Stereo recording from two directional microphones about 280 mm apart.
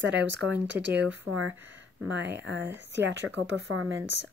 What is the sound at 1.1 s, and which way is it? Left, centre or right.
A woman's voice, right.